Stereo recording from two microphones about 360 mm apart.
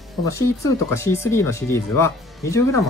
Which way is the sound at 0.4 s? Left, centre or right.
Centre.